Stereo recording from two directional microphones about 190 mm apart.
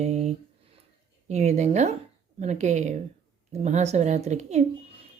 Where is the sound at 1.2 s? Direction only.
35° right (ahead or behind).